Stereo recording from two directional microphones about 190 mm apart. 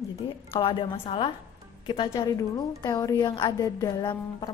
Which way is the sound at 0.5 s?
30° left (ahead or behind).